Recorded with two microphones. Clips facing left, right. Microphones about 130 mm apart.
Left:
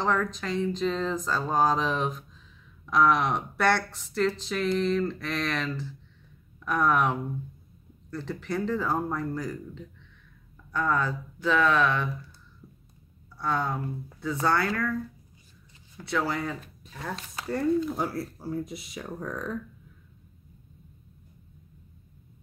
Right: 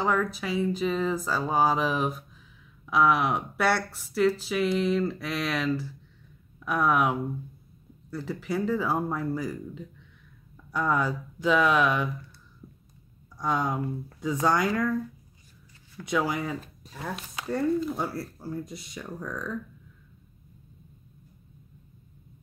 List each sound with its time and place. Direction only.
0.0 s speech: 10° right (ahead or behind)
13.4 s speech: 15° right (ahead or behind)
16.1 s speech: 10° right (ahead or behind); by 19.1 s 5° left (ahead or behind)
19.1 s speech: 20° left (ahead or behind)